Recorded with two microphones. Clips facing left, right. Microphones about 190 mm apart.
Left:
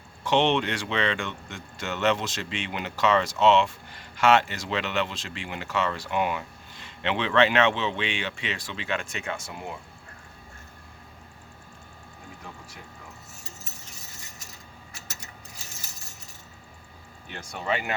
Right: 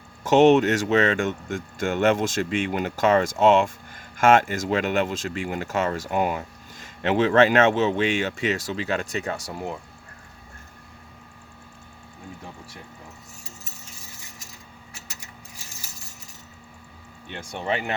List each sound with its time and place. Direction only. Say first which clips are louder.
0.3 s speech: right 8 dB; 45° right (ahead or behind)